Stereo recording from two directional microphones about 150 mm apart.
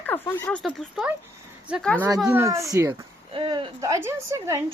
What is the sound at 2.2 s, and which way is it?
Speech, 15° right (ahead or behind).